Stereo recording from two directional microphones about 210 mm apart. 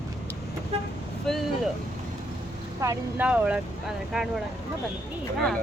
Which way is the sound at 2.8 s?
10° right (ahead or behind).